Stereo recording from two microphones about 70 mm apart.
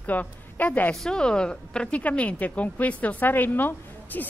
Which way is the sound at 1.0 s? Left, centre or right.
Centre.